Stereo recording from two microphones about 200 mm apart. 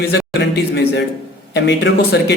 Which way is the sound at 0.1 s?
60° left (ahead or behind).